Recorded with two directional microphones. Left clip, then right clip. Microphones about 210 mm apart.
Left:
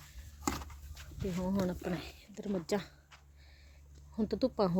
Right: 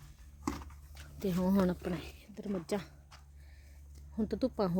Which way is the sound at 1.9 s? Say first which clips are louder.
Left 1 dB; centre (ahead or behind).